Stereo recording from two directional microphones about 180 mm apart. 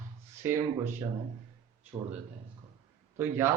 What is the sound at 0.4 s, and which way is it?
Speech, 15° right (ahead or behind).